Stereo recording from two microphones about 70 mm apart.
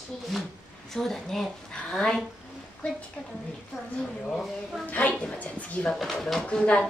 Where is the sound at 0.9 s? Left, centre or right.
Centre.